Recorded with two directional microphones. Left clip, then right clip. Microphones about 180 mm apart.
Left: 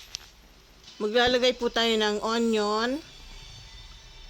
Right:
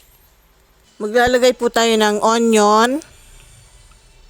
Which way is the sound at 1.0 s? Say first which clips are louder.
Right 9 dB; 35° right (ahead or behind).